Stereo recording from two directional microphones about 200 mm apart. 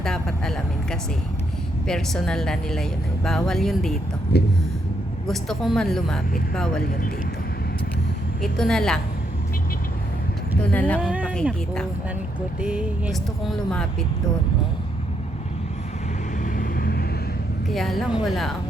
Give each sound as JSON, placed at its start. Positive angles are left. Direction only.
{"t": 0.0, "sound": "speech", "side_deg": 5}
{"t": 4.3, "sound": "a sound", "side_deg": 55}
{"t": 5.3, "sound": "speech", "side_deg": 0}
{"t": 8.4, "sound": "speech", "side_deg": 0}
{"t": 10.6, "sound": "speech", "side_deg": 5}
{"t": 11.0, "sound": "speech", "side_deg": -5}
{"t": 16.4, "sound": "vehicle", "side_deg": 45}
{"t": 17.7, "sound": "speech", "side_deg": 0}